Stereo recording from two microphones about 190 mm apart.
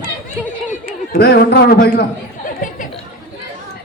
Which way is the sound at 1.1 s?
60° left (ahead or behind).